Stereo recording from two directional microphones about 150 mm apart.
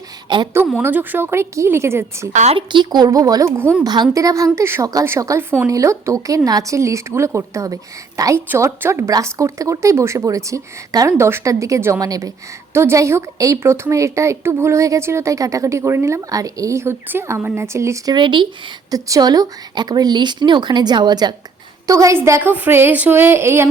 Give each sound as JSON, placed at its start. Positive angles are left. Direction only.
{"t": 0.3, "sound": "a woman's voice", "side_deg": -30}
{"t": 0.8, "sound": "a woman's voice", "side_deg": -10}
{"t": 2.3, "sound": "speech", "side_deg": -50}
{"t": 2.6, "sound": "a woman's voice", "side_deg": -30}
{"t": 3.6, "sound": "a woman's voice", "side_deg": -15}
{"t": 3.8, "sound": "a woman's voice", "side_deg": -30}